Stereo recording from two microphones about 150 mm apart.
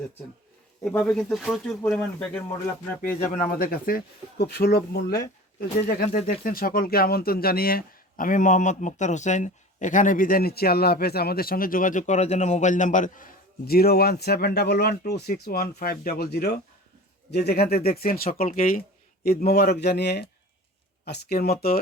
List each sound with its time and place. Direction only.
0.9 s speech: 5° left (ahead or behind)
3.6 s speech: 75° left (ahead or behind); by 6.1 s 90° left
6.2 s speech: 70° left (ahead or behind)
18.3 s speech: 65° left (ahead or behind)
19.5 s speech: 90° left